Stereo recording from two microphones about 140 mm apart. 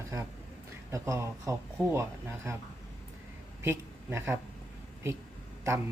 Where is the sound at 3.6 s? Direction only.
20° right (ahead or behind).